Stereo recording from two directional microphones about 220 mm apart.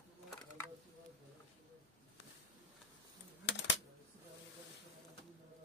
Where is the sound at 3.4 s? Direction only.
55° left (ahead or behind).